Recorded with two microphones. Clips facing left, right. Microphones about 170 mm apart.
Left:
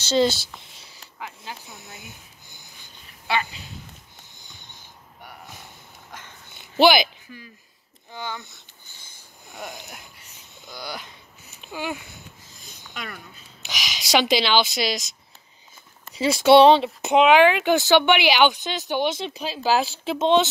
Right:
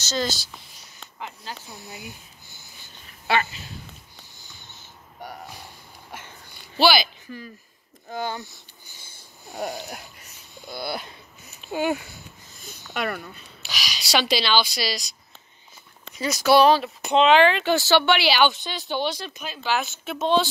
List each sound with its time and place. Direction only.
0.1 s speech: 25° left (ahead or behind)
2.0 s a sound: 20° left (ahead or behind)
4.4 s a sound: 20° left (ahead or behind)
6.5 s a sound: 20° left (ahead or behind)
7.2 s speech: 45° right (ahead or behind)
9.5 s snoring: 40° right (ahead or behind)
10.7 s speech: 15° right (ahead or behind)
11.4 s a sound: 15° left (ahead or behind)
11.7 s speech: 40° right (ahead or behind)
12.9 s speech: 60° right (ahead or behind)
13.6 s speech: 20° left (ahead or behind)
16.2 s speech: 25° left (ahead or behind)
17.2 s speech: 10° left (ahead or behind)